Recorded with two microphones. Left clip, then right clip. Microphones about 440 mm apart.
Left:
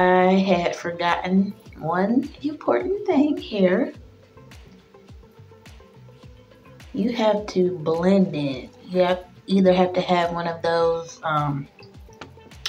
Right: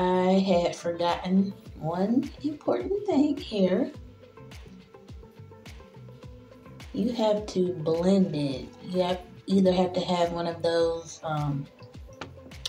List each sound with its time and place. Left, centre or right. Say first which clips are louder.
0.0 s speech: left 7 dB; right
7.1 s speech: left 5 dB; right
12.2 s music: even; centre